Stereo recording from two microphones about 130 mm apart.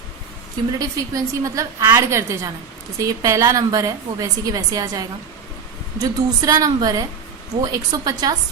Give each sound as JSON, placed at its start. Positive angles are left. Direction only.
{"t": 0.8, "sound": "a woman's voice", "side_deg": -25}